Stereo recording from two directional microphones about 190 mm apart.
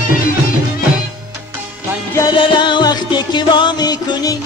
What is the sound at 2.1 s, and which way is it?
Music, 25° left (ahead or behind).